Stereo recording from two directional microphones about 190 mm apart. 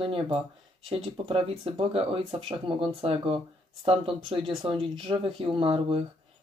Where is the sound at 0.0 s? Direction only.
30° right (ahead or behind).